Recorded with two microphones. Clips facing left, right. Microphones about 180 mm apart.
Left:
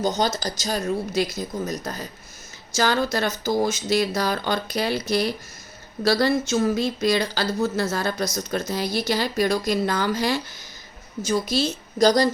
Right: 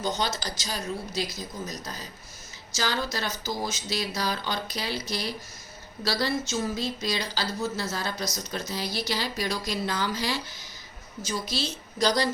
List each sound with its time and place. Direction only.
0.0 s speech: 40° left (ahead or behind)